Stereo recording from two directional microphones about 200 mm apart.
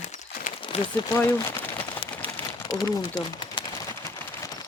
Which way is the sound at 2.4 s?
10° left (ahead or behind).